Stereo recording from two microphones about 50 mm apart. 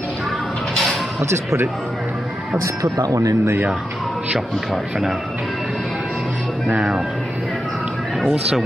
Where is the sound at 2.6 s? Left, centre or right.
Right.